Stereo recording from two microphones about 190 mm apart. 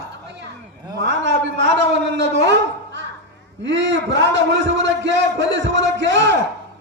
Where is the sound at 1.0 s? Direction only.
70° right (ahead or behind).